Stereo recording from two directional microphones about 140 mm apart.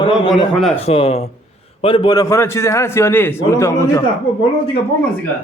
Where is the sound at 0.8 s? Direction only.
45° left (ahead or behind); by 4.0 s 20° left (ahead or behind).